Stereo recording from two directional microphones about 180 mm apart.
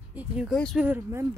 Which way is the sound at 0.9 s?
15° right (ahead or behind).